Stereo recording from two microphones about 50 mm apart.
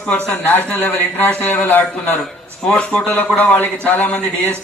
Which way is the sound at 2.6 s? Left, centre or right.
Left.